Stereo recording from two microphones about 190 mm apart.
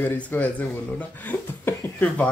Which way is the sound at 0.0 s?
10° left (ahead or behind).